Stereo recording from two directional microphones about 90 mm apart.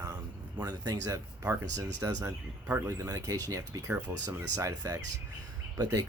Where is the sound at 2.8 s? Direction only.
35° right (ahead or behind).